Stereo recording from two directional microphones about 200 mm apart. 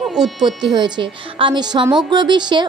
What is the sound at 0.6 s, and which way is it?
A woman's voice, 20° right (ahead or behind).